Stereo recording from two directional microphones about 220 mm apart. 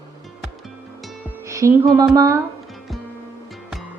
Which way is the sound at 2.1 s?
15° right (ahead or behind).